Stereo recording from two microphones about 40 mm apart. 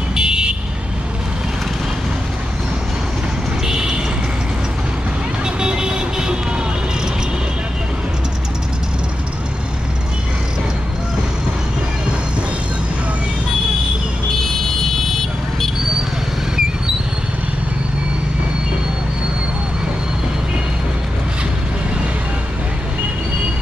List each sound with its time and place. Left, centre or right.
0.1 s vehicle: right
3.6 s a sound: centre
5.4 s vehicle: centre